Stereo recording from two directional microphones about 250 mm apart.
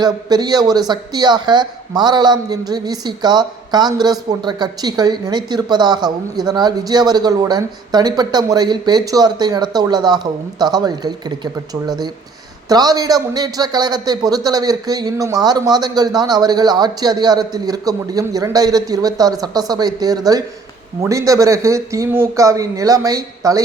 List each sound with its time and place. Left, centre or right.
0.0 s speech: centre